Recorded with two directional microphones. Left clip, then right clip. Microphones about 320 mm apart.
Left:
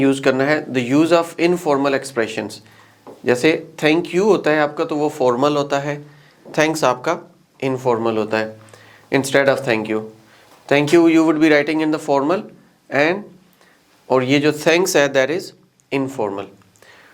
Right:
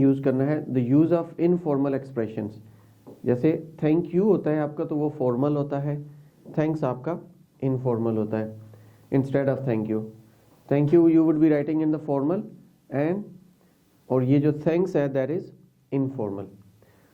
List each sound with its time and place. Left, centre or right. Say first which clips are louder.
0.0 s speech: left 7 dB; centre